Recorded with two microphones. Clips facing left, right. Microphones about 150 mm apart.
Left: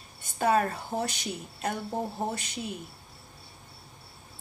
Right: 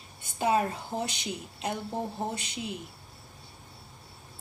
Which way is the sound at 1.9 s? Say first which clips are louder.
Left 1 dB; 10° left (ahead or behind).